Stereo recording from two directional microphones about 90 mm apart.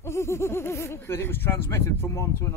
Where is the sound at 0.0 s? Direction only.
30° left (ahead or behind).